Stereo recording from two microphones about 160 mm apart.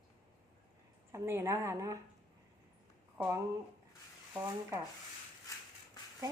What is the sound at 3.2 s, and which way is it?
Speech, 20° right (ahead or behind).